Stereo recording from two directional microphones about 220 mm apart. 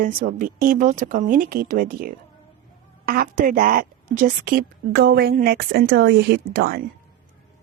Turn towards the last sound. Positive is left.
turn(degrees=-45)  # may be behind; listen again after turning